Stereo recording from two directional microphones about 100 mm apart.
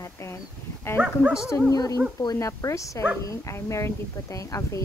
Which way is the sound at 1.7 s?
35° left (ahead or behind).